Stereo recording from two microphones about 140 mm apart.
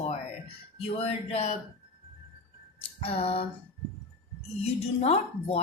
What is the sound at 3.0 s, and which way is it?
Speech, 45° left (ahead or behind).